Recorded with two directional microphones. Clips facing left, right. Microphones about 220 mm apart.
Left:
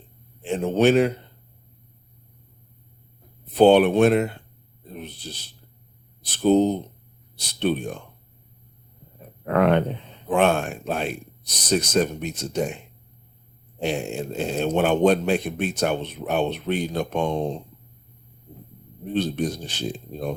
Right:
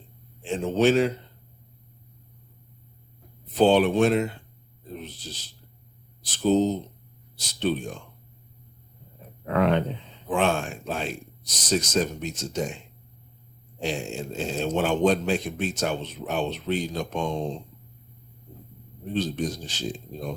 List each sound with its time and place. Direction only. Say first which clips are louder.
0.4 s a man's voice: left 2 dB; 60° left (ahead or behind)
3.5 s a man's voice: left 4 dB; 60° left (ahead or behind)
9.5 s a man's voice: left 3 dB; 55° left (ahead or behind)
13.8 s a man's voice: left 4 dB; 60° left (ahead or behind)
19.1 s a man's voice: left 3 dB; 60° left (ahead or behind)